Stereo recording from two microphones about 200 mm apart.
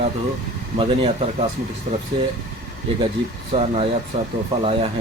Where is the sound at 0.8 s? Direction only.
30° right (ahead or behind).